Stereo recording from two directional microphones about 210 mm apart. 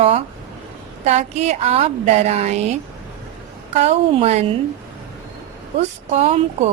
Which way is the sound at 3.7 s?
30° right (ahead or behind).